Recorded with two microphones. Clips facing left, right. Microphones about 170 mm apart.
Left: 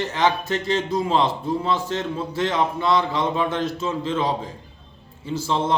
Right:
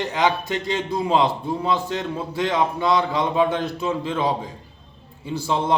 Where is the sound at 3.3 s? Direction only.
15° right (ahead or behind).